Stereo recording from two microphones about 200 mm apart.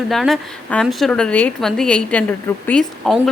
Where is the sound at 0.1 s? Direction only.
Centre (ahead or behind).